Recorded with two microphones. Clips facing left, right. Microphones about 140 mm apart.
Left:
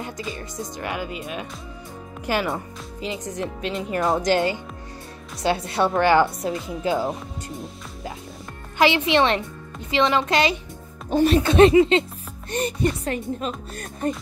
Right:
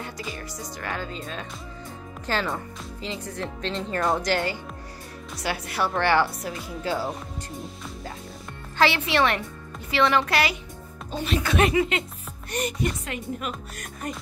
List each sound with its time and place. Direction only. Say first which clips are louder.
0.0 s speech: left 3 dB; 20° left (ahead or behind)
8.7 s speech: left 4 dB; 15° left (ahead or behind)